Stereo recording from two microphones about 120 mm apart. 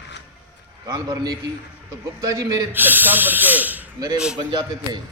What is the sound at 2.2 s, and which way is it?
Speech, 30° right (ahead or behind).